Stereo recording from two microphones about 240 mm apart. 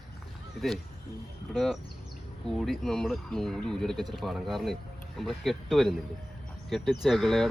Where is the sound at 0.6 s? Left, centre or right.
Centre.